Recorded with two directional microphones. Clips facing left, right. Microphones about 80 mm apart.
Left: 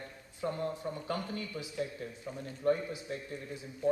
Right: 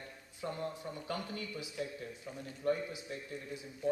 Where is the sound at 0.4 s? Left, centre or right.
Left.